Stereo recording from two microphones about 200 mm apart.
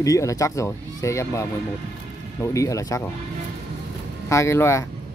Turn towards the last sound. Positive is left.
turn(degrees=15)  # may be behind; listen again after turning